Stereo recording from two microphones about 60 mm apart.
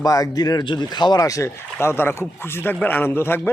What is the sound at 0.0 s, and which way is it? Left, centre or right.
Speech, left.